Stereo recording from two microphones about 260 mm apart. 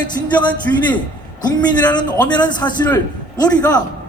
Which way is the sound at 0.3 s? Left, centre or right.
Centre.